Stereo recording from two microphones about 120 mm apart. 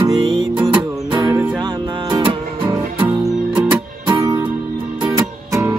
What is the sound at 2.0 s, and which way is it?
Music, 35° right (ahead or behind).